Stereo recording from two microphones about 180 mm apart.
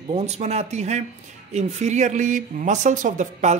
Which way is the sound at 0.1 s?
40° right (ahead or behind).